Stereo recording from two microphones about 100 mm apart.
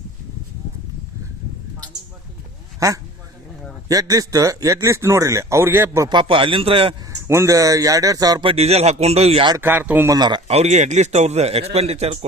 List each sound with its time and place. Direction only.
3.8 s a man's voice: 35° right (ahead or behind)
6.1 s a man's voice: 55° right (ahead or behind)
7.1 s a man's voice: 30° right (ahead or behind)
8.4 s speech: 80° right
9.6 s speech: 20° right (ahead or behind)
10.1 s speech: 45° right (ahead or behind)
11.1 s speech: 90° right